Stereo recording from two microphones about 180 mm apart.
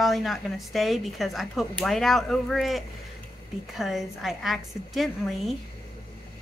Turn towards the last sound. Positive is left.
turn(degrees=0)  # may be behind; listen again after turning